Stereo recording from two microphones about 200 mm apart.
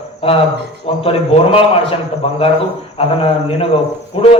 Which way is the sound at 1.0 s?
30° left (ahead or behind).